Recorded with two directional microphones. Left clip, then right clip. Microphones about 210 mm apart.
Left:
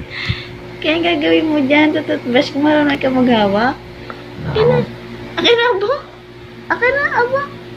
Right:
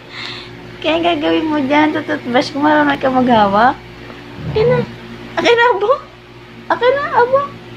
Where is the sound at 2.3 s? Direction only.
25° right (ahead or behind).